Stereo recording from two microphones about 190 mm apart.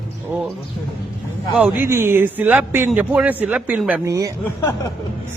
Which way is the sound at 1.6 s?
10° right (ahead or behind).